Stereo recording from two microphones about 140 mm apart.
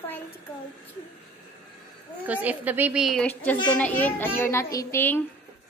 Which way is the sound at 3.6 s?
10° left (ahead or behind).